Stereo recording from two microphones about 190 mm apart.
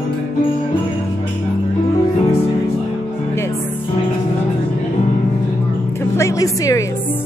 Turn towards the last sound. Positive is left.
turn(degrees=20)  # may be behind; listen again after turning